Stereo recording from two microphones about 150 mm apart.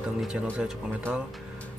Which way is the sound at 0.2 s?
5° right (ahead or behind).